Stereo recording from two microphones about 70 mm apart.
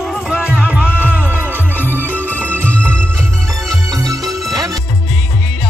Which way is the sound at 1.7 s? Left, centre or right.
Left.